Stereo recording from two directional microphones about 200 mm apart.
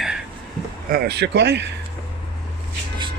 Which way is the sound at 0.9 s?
55° right (ahead or behind).